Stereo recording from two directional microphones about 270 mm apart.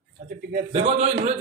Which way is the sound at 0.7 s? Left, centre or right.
Right.